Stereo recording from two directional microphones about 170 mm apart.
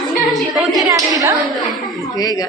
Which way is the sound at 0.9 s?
20° right (ahead or behind).